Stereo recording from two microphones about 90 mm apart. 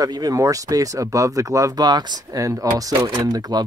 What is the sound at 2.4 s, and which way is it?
Speech, 35° right (ahead or behind).